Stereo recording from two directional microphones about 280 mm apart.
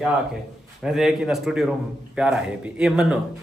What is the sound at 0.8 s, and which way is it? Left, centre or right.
Speech, centre.